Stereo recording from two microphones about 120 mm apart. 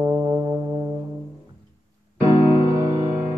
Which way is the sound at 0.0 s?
35° right (ahead or behind).